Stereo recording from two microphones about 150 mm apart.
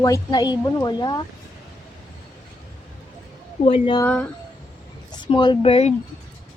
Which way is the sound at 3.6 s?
35° left (ahead or behind).